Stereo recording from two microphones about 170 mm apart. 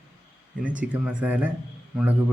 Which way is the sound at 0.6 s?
10° right (ahead or behind).